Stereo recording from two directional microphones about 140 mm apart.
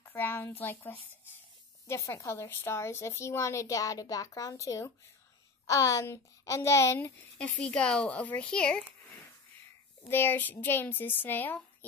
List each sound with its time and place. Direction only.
0.0 s a woman's voice: 15° left (ahead or behind)
7.3 s speech: 10° left (ahead or behind)
10.0 s speech: 15° left (ahead or behind)